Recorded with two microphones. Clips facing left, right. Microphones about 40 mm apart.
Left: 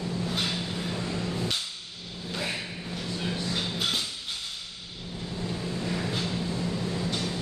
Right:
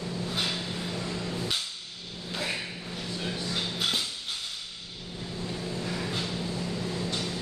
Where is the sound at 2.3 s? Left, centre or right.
Centre.